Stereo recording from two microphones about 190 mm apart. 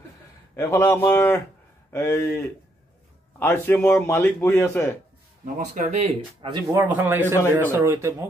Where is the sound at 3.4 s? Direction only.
10° left (ahead or behind).